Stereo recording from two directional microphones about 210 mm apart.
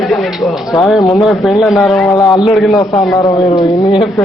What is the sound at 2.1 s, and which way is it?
Speech, 20° left (ahead or behind).